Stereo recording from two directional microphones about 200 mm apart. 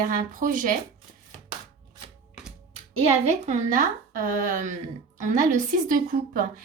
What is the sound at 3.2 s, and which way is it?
A woman's voice, 35° right (ahead or behind).